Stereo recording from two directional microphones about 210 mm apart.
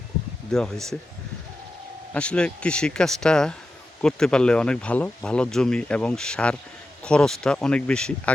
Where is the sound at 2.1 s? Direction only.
5° left (ahead or behind).